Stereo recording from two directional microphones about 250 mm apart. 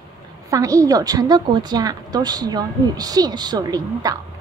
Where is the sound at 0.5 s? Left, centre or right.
Centre.